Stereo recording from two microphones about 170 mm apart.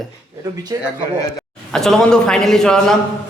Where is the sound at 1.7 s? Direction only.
5° left (ahead or behind).